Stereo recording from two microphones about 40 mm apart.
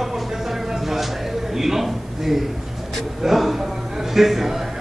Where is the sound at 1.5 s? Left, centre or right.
Centre.